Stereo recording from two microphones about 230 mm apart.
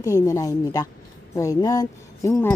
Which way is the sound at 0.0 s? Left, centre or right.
Centre.